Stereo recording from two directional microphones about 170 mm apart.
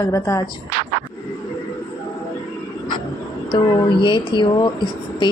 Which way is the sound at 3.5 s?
25° left (ahead or behind).